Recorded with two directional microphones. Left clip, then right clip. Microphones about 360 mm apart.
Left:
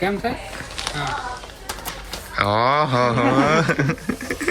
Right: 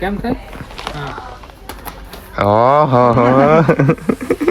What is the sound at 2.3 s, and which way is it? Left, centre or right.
Speech, centre.